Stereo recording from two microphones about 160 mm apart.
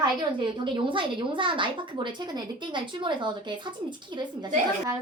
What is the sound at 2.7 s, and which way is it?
Speech, 30° right (ahead or behind).